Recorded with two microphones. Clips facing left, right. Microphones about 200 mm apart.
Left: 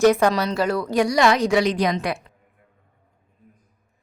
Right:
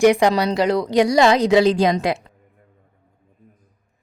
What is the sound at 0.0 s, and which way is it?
A woman's voice, 15° right (ahead or behind).